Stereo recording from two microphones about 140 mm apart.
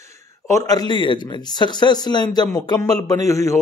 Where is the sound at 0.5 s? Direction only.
25° left (ahead or behind).